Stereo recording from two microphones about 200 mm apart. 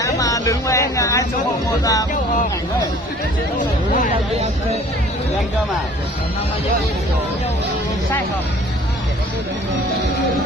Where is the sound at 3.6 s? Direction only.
40° left (ahead or behind).